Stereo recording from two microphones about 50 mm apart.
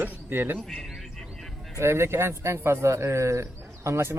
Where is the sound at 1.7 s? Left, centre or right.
Right.